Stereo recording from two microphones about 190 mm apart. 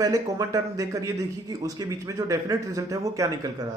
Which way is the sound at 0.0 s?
20° right (ahead or behind).